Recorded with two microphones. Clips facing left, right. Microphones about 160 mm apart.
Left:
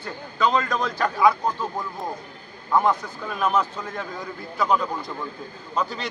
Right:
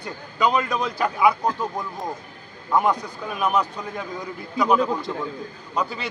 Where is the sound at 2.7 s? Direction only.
10° right (ahead or behind).